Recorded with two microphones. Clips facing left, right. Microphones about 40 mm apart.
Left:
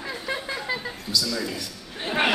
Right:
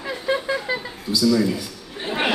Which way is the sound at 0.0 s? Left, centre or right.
Centre.